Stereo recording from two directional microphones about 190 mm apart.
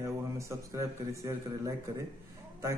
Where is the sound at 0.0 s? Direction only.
15° right (ahead or behind).